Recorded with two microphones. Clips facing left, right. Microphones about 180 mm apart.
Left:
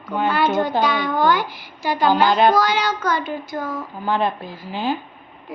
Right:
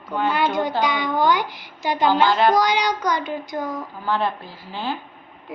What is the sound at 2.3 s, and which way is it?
Child singing, 20° left (ahead or behind).